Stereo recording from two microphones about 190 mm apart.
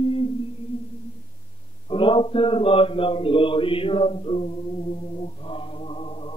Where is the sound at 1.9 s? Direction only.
25° left (ahead or behind).